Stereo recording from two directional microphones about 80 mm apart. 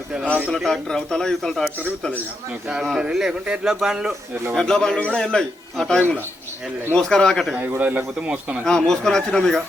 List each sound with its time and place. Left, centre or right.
0.5 s a man's voice: centre
2.8 s a man's voice: centre
4.5 s a man's voice: centre
7.8 s speech: centre
8.6 s a man's voice: centre